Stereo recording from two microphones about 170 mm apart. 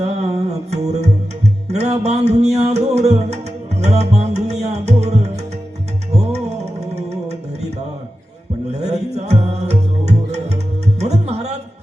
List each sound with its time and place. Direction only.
0.0 s music: 40° right (ahead or behind)
8.7 s music: 40° right (ahead or behind)